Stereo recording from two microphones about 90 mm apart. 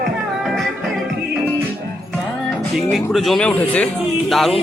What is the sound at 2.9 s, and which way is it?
Speech, centre (ahead or behind).